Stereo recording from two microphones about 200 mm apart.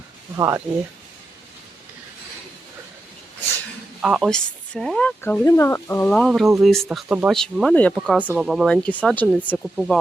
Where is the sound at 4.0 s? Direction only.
5° right (ahead or behind).